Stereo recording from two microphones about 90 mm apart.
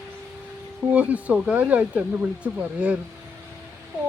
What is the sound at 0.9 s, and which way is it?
Speech, 15° right (ahead or behind).